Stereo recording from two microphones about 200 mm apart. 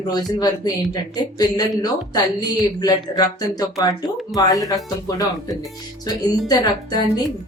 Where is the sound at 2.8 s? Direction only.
20° left (ahead or behind).